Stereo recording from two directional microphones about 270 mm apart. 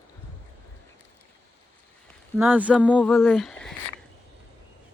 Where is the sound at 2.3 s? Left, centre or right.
Centre.